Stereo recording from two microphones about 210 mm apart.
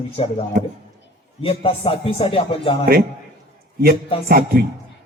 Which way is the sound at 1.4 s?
25° left (ahead or behind).